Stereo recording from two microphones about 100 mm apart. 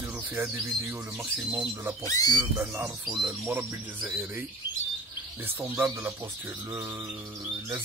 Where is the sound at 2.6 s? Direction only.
20° right (ahead or behind).